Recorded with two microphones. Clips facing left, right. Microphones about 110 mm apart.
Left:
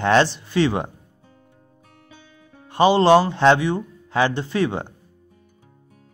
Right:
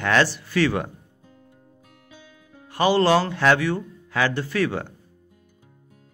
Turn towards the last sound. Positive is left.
turn(degrees=25)  # may be behind; listen again after turning